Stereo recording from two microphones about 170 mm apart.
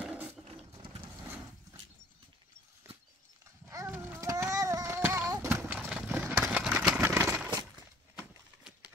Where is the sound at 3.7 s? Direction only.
15° right (ahead or behind).